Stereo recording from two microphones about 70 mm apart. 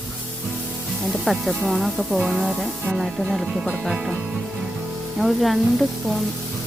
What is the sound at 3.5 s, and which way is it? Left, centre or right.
Speech, centre.